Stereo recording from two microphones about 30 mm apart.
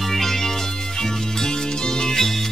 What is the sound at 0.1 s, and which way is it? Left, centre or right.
Music, centre.